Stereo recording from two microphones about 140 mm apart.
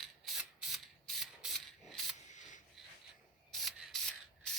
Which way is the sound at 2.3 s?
65° left (ahead or behind).